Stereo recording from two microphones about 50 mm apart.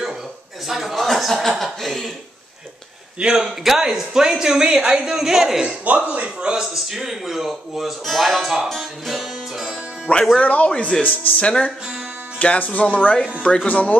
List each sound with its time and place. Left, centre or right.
0.7 s speech: centre
3.2 s speech: centre
5.9 s a man's voice: right; by 8.6 s centre
8.6 s music: centre
10.1 s speech: left